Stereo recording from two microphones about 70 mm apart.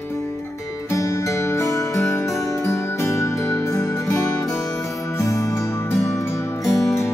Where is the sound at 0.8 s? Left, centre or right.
Left.